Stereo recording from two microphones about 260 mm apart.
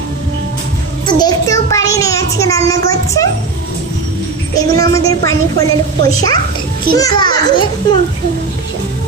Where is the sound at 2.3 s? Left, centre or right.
Centre.